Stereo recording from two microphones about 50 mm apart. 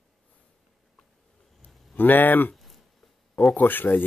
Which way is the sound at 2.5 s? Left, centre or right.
Centre.